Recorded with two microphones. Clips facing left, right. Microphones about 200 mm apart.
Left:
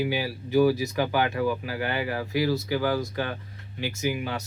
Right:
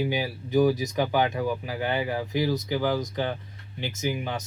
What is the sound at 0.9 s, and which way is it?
Speech, 20° right (ahead or behind).